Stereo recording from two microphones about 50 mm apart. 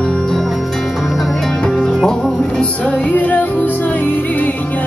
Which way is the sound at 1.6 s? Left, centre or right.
Centre.